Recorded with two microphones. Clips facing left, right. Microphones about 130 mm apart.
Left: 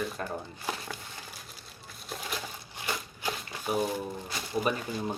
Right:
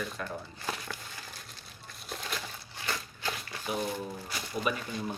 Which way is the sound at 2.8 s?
15° left (ahead or behind).